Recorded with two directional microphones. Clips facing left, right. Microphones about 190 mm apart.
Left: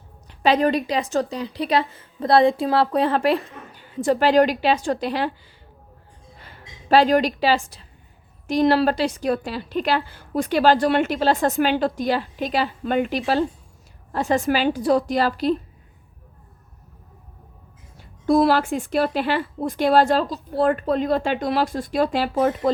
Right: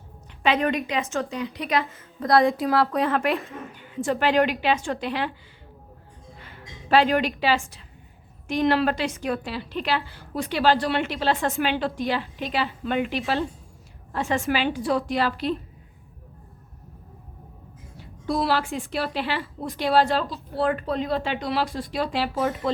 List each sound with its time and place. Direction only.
0.3 s a woman's voice: 35° left (ahead or behind)
6.4 s a woman's voice: 35° left (ahead or behind)
17.9 s speech: 50° left (ahead or behind)